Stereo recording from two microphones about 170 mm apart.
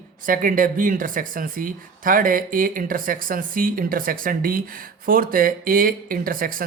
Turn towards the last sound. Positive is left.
turn(degrees=-55)  # may be behind; listen again after turning